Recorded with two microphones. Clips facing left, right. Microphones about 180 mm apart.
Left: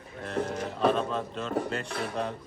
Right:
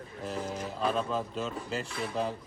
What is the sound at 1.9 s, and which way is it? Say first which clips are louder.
Speech: left 2 dB; 60° left (ahead or behind).